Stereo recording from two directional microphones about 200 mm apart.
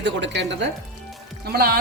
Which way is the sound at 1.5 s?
50° right (ahead or behind).